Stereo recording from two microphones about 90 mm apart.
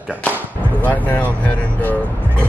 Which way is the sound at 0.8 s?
20° left (ahead or behind).